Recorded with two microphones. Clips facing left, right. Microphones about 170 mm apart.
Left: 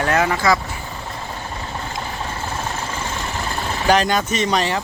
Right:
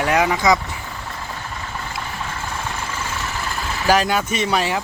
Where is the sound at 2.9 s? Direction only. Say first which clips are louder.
Left 1 dB; 35° left (ahead or behind).